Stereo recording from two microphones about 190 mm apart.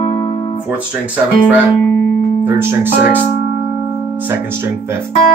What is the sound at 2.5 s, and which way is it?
Speech, 10° right (ahead or behind).